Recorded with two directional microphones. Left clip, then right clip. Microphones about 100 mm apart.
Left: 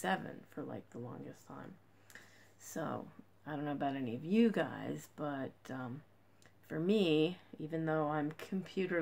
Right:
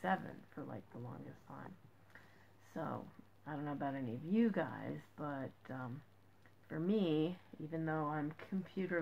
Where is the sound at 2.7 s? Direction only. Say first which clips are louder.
Left 3 dB; 30° left (ahead or behind).